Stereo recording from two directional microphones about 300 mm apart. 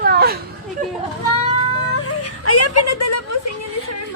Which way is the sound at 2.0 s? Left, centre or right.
Left.